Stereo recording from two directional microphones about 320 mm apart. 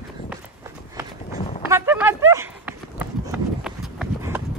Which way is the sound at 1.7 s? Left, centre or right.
Centre.